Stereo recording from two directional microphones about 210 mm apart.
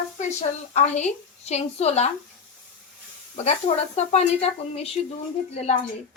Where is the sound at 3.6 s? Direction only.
30° left (ahead or behind).